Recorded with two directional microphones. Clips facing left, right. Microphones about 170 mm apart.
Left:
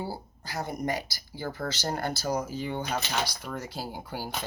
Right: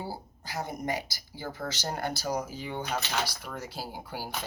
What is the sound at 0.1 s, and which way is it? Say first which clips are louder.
A woman's voice: left 1 dB; 15° right (ahead or behind).